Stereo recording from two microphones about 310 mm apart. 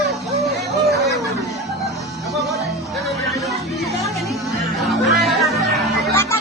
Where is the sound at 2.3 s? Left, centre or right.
Centre.